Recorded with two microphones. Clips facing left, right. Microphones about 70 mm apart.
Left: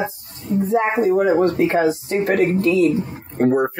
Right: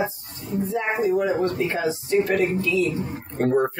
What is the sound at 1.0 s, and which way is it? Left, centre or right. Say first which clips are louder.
Speech: left 4 dB; left.